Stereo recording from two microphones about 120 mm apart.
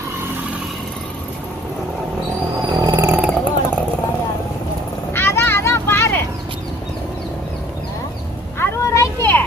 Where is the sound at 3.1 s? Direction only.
10° right (ahead or behind).